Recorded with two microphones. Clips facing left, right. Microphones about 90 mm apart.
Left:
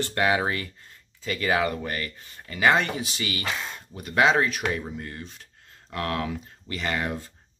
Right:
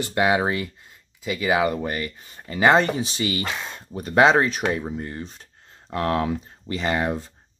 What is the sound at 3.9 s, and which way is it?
Speech, 35° right (ahead or behind).